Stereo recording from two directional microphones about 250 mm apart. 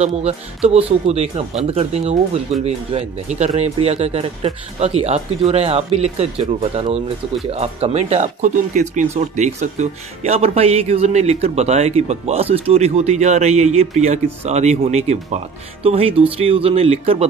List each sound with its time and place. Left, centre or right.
0.0 s speech: right